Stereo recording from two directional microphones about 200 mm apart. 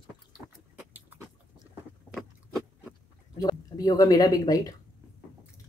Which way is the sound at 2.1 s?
Centre (ahead or behind).